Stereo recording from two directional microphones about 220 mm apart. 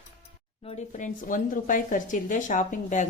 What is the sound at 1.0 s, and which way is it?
Speech, 35° left (ahead or behind).